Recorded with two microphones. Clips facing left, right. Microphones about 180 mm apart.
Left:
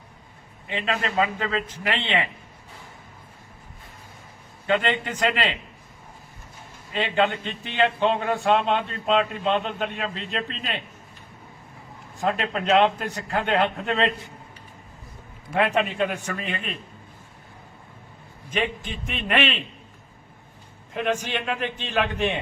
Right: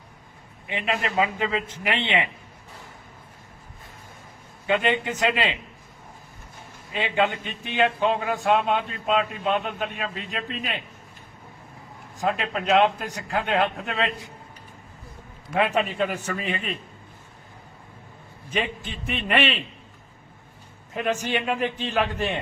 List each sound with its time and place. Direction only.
0.7 s a man's voice: 15° right (ahead or behind)
4.6 s a man's voice: 15° right (ahead or behind)
6.9 s a man's voice: 10° right (ahead or behind)
12.2 s a man's voice: 5° right (ahead or behind)
15.5 s a man's voice: centre (ahead or behind)
18.9 s a man's voice: centre (ahead or behind)
20.9 s a man's voice: 5° right (ahead or behind)